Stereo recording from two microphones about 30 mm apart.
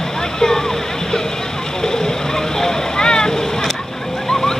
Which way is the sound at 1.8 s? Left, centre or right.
Left.